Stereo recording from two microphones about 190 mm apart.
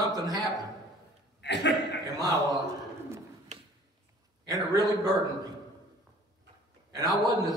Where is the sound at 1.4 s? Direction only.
65° left (ahead or behind).